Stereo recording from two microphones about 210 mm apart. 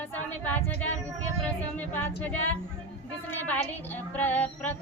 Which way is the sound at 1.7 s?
10° left (ahead or behind).